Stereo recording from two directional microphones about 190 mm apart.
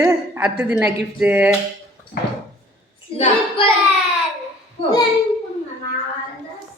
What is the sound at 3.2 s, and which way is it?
Child singing, 30° left (ahead or behind).